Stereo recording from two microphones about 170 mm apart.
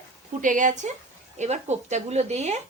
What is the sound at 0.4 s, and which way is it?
Speech, 50° right (ahead or behind).